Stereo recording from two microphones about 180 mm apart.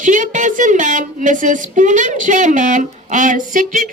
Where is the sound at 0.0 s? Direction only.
45° right (ahead or behind).